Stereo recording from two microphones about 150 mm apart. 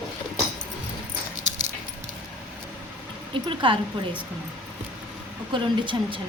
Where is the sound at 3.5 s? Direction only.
35° right (ahead or behind).